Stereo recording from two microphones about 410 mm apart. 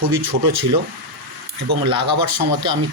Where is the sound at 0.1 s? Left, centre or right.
Right.